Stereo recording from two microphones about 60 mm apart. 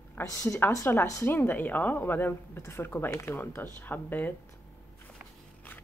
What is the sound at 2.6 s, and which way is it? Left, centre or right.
Speech, left.